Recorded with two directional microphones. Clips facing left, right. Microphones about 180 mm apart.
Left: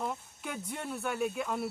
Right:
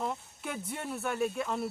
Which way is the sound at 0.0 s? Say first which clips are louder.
Right 1 dB; centre (ahead or behind).